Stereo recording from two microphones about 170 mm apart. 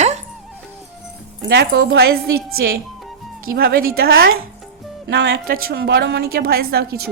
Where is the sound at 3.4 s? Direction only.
60° right (ahead or behind).